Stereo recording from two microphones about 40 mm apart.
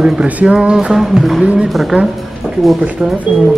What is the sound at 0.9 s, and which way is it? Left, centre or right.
Speech, centre.